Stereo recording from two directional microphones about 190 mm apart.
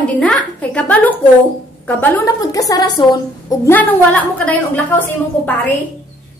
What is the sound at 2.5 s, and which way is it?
Speech, 20° left (ahead or behind).